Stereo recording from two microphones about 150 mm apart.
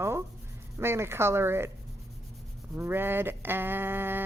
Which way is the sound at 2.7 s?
15° right (ahead or behind).